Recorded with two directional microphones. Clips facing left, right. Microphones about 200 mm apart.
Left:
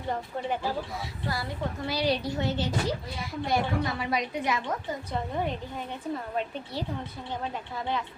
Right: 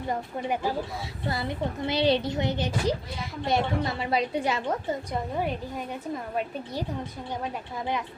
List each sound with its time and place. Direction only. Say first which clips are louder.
0.1 s a woman's voice: right 1 dB; 10° right (ahead or behind)
1.3 s a woman's voice: right 3 dB; 20° right (ahead or behind)
5.4 s a woman's voice: right 2 dB; 10° right (ahead or behind)